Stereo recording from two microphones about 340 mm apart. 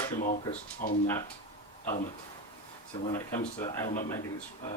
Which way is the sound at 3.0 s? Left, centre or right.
Centre.